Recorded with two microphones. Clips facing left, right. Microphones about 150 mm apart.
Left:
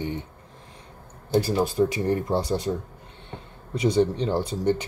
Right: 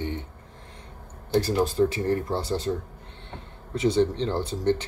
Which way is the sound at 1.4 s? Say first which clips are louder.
Even; 10° left (ahead or behind).